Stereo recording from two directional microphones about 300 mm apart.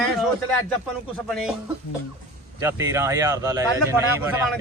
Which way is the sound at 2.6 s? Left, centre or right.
Centre.